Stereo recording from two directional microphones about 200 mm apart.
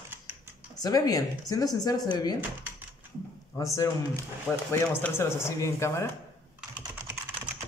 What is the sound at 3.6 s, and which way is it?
Speech, 15° left (ahead or behind).